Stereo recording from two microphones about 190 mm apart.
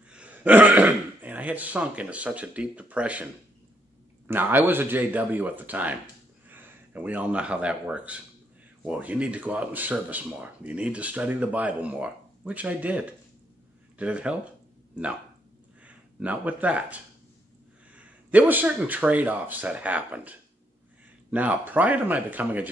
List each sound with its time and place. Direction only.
0.1 s speech: 5° right (ahead or behind)
4.3 s speech: 10° right (ahead or behind)
15.8 s speech: 5° right (ahead or behind)